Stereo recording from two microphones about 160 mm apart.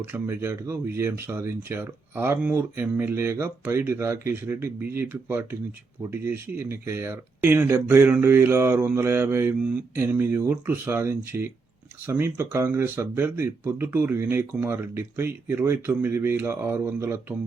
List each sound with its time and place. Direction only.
0.0 s speech: 15° right (ahead or behind)